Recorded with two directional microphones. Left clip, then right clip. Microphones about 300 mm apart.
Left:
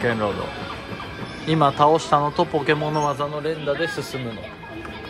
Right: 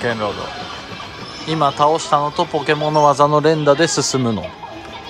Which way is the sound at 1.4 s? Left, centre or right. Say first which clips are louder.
Right 2 dB; centre.